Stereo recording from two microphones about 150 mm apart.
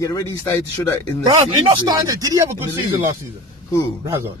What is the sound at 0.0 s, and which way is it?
Speech, 20° left (ahead or behind).